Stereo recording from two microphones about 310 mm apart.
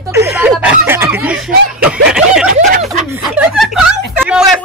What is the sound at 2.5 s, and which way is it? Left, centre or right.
Snicker, right.